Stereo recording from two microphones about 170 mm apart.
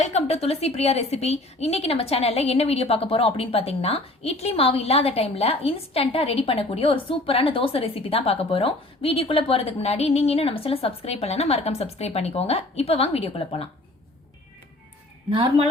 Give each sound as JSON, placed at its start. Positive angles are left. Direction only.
{"t": 0.0, "sound": "a woman's voice", "side_deg": 40}
{"t": 15.3, "sound": "speech", "side_deg": -35}